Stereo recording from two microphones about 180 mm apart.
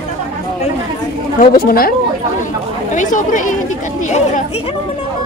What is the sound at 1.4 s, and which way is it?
Speech, 55° left (ahead or behind).